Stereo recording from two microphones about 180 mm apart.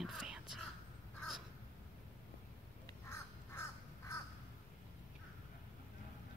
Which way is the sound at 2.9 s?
15° left (ahead or behind).